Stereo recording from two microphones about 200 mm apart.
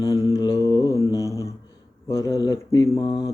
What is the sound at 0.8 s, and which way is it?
Mantra, 15° right (ahead or behind).